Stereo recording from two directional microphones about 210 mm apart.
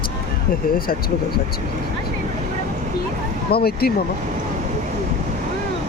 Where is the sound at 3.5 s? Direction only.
45° left (ahead or behind).